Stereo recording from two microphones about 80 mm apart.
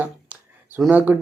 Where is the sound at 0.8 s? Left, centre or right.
Right.